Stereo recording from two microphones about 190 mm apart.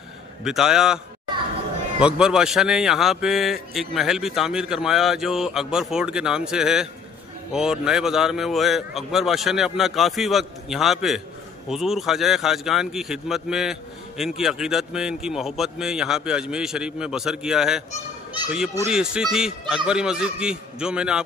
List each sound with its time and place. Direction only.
0.4 s speech: centre (ahead or behind)
18.9 s speech: 5° right (ahead or behind)